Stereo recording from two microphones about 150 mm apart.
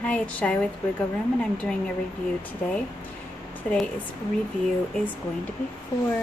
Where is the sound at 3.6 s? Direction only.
5° left (ahead or behind).